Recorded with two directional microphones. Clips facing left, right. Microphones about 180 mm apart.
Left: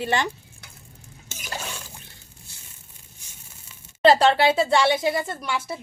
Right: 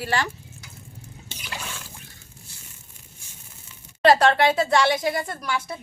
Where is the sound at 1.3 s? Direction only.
45° left (ahead or behind).